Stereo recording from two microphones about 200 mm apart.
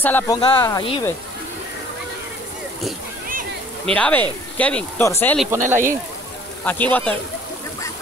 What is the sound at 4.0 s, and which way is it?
Speech, 10° left (ahead or behind).